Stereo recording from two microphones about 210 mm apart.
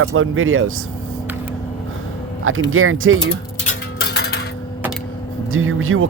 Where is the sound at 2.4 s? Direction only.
75° right (ahead or behind).